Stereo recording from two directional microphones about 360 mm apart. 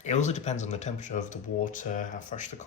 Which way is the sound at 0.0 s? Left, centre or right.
Centre.